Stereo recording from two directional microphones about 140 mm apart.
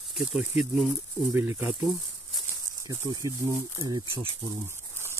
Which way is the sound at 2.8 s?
25° right (ahead or behind).